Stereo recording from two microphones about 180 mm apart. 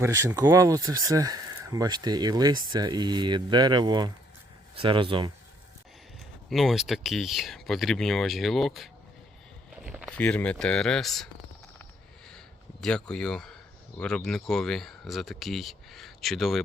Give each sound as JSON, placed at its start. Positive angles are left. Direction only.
{"t": 0.0, "sound": "speech", "side_deg": -15}
{"t": 6.5, "sound": "speech", "side_deg": 0}
{"t": 10.1, "sound": "speech", "side_deg": 5}
{"t": 12.8, "sound": "speech", "side_deg": 5}